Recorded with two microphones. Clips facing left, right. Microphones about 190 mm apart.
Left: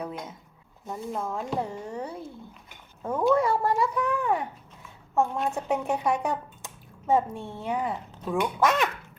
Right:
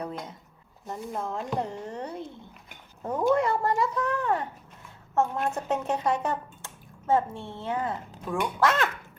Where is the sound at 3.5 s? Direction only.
5° left (ahead or behind).